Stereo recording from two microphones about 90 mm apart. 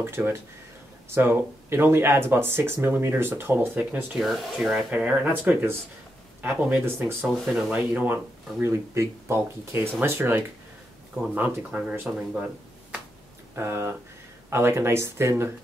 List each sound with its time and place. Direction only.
0.0 s speech: 25° right (ahead or behind)
4.2 s speech: 5° right (ahead or behind)
13.6 s speech: 30° right (ahead or behind)